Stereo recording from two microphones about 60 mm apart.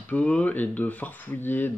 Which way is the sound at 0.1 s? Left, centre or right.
Left.